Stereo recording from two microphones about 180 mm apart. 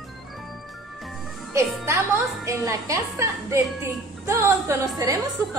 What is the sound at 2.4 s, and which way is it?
A woman's voice, 15° right (ahead or behind).